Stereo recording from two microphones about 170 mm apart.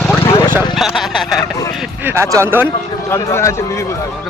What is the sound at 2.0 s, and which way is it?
Speech, 15° right (ahead or behind).